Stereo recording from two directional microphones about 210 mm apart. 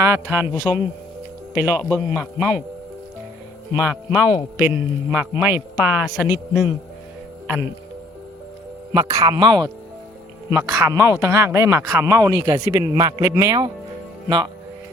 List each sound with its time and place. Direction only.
0.0 s speech: 10° right (ahead or behind)
1.5 s a man's voice: 10° right (ahead or behind)
4.1 s speech: 5° right (ahead or behind)
8.9 s speech: 15° right (ahead or behind)